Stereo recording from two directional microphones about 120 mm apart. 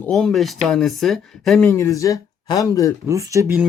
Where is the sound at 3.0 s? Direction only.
25° right (ahead or behind).